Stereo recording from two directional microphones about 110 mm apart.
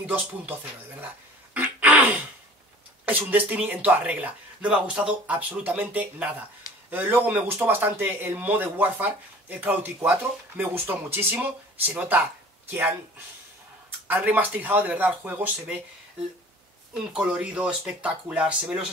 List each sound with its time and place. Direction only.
0.0 s speech: 15° right (ahead or behind)
1.0 s a sound: 15° right (ahead or behind)
3.1 s speech: 15° right (ahead or behind)
17.1 s speech: 10° right (ahead or behind)